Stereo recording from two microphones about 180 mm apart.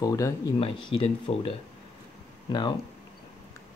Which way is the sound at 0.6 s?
30° left (ahead or behind).